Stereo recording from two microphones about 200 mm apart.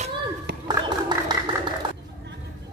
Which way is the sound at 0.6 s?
20° right (ahead or behind).